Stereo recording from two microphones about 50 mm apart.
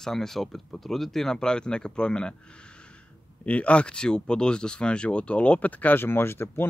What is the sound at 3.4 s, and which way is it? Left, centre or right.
Speech, left.